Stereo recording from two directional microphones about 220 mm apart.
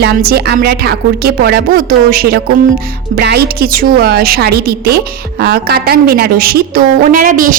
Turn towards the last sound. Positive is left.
turn(degrees=-40)  # may be behind; listen again after turning